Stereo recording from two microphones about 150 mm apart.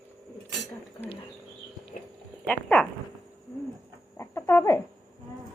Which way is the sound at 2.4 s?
10° left (ahead or behind).